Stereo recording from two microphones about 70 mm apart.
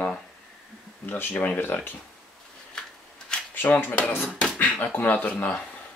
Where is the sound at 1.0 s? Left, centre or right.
Left.